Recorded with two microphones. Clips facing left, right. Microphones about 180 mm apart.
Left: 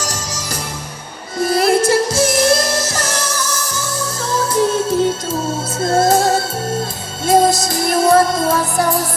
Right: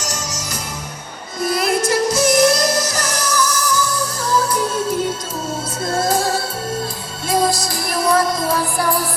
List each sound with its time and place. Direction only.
0.0 s music: 30° left (ahead or behind)
1.5 s music: 30° left (ahead or behind)